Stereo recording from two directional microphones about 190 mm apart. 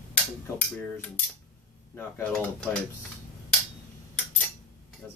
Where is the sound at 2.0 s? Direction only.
10° left (ahead or behind).